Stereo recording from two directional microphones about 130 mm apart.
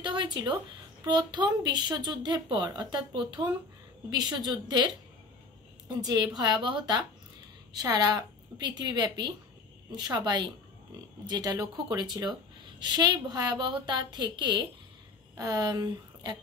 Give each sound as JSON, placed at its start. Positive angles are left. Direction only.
{"t": 0.0, "sound": "a sound", "side_deg": -35}
{"t": 1.0, "sound": "a woman's voice", "side_deg": -35}
{"t": 5.9, "sound": "a woman's voice", "side_deg": -30}